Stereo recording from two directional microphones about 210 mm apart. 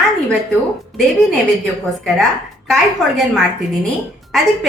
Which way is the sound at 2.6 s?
Centre (ahead or behind).